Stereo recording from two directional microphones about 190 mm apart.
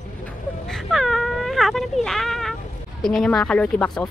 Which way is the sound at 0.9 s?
Centre (ahead or behind).